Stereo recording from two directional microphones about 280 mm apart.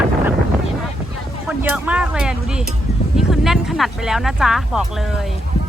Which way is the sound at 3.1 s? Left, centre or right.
Centre.